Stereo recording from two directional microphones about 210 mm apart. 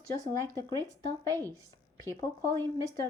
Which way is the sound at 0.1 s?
15° left (ahead or behind).